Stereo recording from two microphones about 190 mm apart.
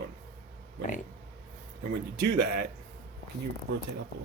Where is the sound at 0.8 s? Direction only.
45° left (ahead or behind).